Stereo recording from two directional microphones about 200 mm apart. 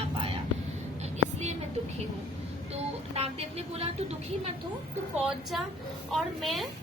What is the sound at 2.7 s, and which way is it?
A woman's voice, 30° right (ahead or behind).